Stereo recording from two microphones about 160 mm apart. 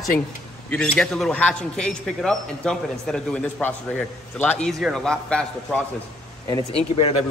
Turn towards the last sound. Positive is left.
turn(degrees=40)  # may be behind; listen again after turning